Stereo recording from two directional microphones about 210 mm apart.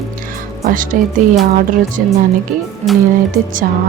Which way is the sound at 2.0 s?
40° right (ahead or behind).